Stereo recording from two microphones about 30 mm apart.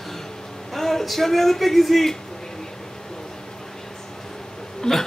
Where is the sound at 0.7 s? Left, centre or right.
Centre.